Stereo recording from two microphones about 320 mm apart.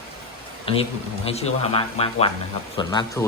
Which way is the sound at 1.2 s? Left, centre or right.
Centre.